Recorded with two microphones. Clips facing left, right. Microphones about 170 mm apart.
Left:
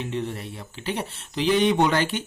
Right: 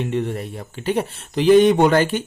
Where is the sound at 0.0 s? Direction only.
55° right (ahead or behind).